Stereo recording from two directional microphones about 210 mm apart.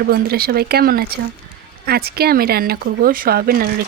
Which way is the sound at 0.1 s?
45° right (ahead or behind).